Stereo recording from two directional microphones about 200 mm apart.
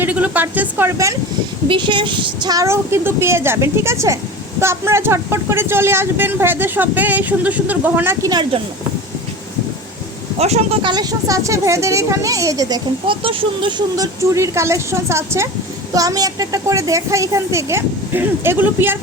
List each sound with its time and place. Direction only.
0.0 s speech: 10° right (ahead or behind)
10.3 s speech: 30° right (ahead or behind); by 18.9 s 10° right (ahead or behind)